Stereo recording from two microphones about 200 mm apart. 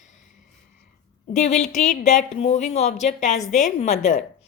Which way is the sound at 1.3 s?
35° left (ahead or behind).